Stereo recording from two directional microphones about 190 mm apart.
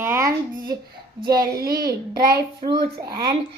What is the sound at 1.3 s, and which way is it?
Child singing, 55° right (ahead or behind).